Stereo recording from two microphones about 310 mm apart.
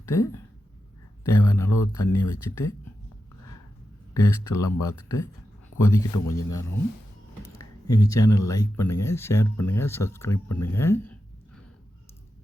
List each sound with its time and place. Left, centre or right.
0.0 s speech: centre
4.1 s speech: centre
6.2 s speech: left
7.6 s speech: centre
10.5 s a sound: centre